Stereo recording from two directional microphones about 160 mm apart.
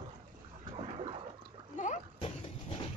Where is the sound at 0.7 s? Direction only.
35° right (ahead or behind).